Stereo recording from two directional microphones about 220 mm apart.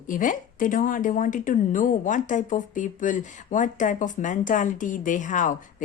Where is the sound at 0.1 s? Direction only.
35° left (ahead or behind).